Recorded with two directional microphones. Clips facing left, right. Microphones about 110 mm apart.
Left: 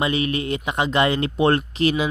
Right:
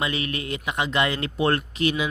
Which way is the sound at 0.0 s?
25° left (ahead or behind).